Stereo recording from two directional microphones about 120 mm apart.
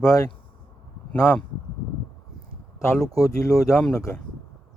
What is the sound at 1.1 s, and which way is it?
Speech, 20° left (ahead or behind).